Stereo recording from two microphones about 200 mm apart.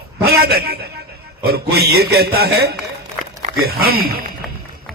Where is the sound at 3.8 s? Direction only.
50° right (ahead or behind).